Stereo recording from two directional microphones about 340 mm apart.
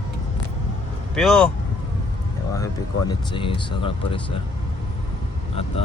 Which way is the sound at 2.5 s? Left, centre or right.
Centre.